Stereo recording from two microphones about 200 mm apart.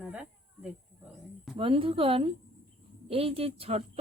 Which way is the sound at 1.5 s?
25° right (ahead or behind).